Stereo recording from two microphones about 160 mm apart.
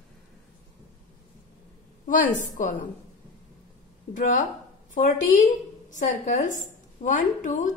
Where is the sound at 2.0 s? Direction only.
55° left (ahead or behind).